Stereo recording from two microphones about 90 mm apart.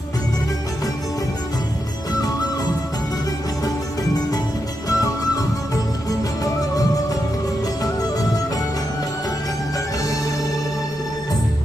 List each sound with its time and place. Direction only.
4.9 s music: 40° left (ahead or behind)